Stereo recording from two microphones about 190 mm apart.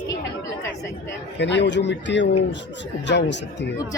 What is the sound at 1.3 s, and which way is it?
A man's voice, 65° left (ahead or behind).